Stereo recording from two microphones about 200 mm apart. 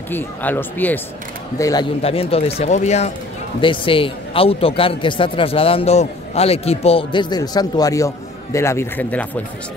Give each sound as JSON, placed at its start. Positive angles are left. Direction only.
{"t": 0.1, "sound": "speech", "side_deg": 10}
{"t": 2.0, "sound": "a man's voice", "side_deg": 30}